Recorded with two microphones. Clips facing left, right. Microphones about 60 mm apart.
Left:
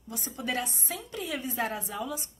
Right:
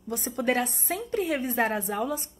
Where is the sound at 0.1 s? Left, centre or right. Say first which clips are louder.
Right 7 dB; right.